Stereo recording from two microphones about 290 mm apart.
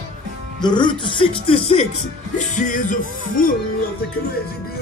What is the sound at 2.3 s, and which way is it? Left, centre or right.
Music, left.